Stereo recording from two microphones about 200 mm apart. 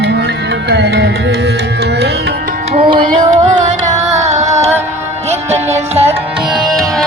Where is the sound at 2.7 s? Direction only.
25° right (ahead or behind).